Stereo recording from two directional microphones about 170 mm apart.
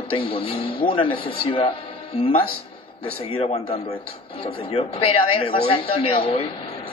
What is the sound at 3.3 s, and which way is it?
A man's voice, 35° left (ahead or behind).